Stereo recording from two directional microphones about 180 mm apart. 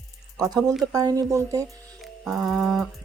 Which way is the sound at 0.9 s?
20° right (ahead or behind).